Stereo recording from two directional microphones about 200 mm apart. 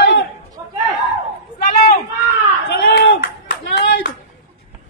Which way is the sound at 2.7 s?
60° left (ahead or behind).